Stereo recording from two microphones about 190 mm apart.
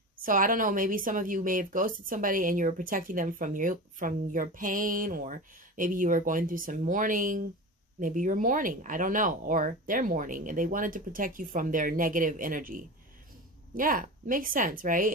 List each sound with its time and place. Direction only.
0.2 s speech: 45° right (ahead or behind)